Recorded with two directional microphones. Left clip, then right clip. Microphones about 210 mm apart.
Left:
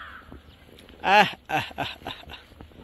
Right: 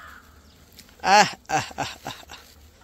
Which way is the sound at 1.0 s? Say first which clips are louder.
Right 2 dB; 15° right (ahead or behind).